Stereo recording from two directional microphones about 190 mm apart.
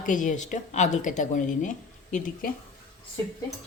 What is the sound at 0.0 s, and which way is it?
Speech, 40° left (ahead or behind).